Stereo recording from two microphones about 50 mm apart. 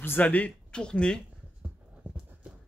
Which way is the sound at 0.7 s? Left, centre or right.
Centre.